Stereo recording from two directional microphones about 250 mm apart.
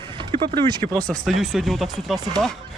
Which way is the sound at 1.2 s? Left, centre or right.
Centre.